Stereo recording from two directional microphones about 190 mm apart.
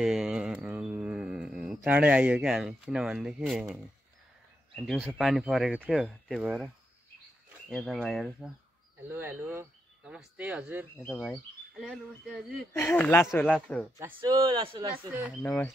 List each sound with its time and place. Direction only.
0.0 s a sound: 5° right (ahead or behind)
4.7 s speech: centre (ahead or behind)
6.0 s speech: 5° left (ahead or behind)
6.4 s speech: 5° right (ahead or behind)
7.7 s speech: centre (ahead or behind)
9.1 s speech: 10° right (ahead or behind)
11.0 s speech: 10° left (ahead or behind)
13.9 s speech: 15° right (ahead or behind)
15.4 s speech: 10° left (ahead or behind)